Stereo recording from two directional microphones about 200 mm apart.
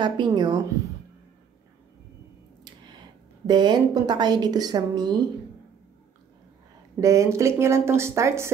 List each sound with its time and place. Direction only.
0.0 s a woman's voice: 20° right (ahead or behind)
3.4 s a woman's voice: 20° right (ahead or behind)
7.0 s speech: 15° right (ahead or behind)